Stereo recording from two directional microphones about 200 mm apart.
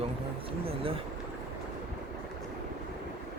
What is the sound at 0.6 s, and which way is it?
Speech, 30° right (ahead or behind).